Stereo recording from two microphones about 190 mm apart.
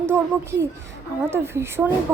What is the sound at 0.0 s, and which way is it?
A child's voice, 15° right (ahead or behind).